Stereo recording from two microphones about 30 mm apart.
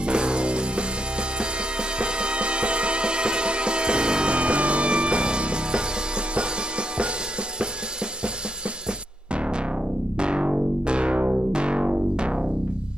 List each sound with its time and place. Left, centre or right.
0.0 s music: right
9.3 s music: right